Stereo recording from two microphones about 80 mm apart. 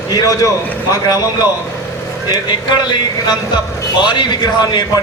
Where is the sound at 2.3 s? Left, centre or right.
Left.